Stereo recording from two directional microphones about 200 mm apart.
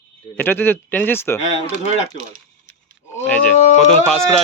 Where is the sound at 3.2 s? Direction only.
5° left (ahead or behind).